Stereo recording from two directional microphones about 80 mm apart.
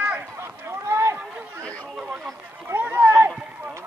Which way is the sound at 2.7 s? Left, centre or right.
Right.